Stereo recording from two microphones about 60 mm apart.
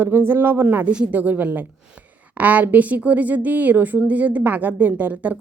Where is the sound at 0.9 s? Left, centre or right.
Right.